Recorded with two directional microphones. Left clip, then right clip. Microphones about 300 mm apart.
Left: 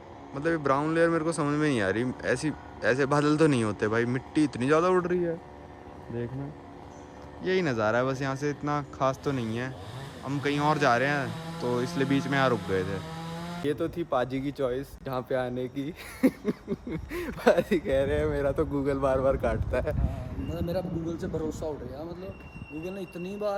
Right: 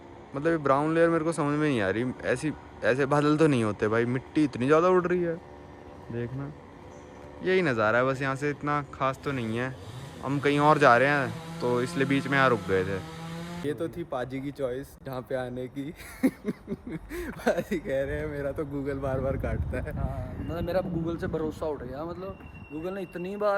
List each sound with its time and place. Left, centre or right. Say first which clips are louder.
0.3 s speech: right 2 dB; centre
21.1 s speech: right 2 dB; centre
23.0 s speech: right 2 dB; centre
23.3 s speech: right 4 dB; centre